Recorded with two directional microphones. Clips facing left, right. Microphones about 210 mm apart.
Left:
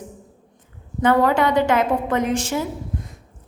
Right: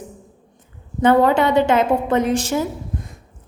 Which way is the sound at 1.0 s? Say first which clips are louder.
Right 3 dB; 25° right (ahead or behind).